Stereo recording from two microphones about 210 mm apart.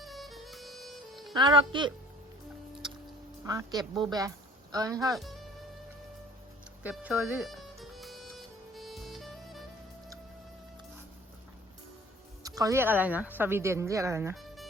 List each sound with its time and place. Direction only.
0.0 s music: centre (ahead or behind)
1.3 s speech: 20° right (ahead or behind)
3.4 s speech: 15° right (ahead or behind)
5.1 s speech: centre (ahead or behind)
6.8 s music: 5° right (ahead or behind)
12.4 s speech: 15° right (ahead or behind)
14.3 s music: centre (ahead or behind)